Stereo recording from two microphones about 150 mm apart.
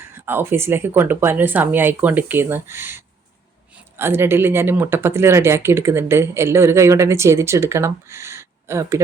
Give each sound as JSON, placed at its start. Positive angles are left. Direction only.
{"t": 0.3, "sound": "speech", "side_deg": -15}